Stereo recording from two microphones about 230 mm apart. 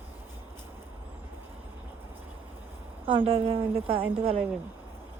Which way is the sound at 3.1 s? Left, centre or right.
Right.